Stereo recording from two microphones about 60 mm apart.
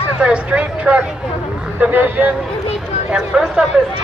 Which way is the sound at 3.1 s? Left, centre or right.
Centre.